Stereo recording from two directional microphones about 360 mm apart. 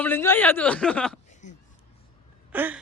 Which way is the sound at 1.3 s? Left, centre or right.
Centre.